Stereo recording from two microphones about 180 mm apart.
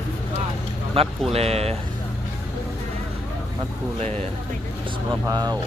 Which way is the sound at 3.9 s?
40° right (ahead or behind).